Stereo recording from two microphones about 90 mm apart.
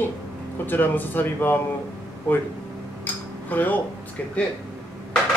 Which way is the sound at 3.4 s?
20° left (ahead or behind).